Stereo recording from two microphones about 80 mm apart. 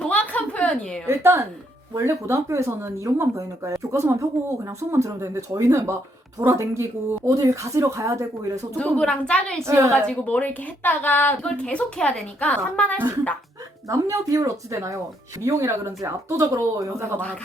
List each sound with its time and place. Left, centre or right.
0.0 s a sound: centre
1.0 s speech: right
8.8 s a woman's voice: centre
9.6 s speech: right
9.9 s a woman's voice: centre
13.9 s speech: right